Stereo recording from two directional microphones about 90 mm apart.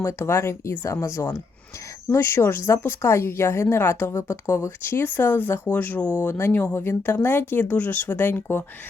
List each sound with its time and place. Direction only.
0.0 s speech: 30° left (ahead or behind)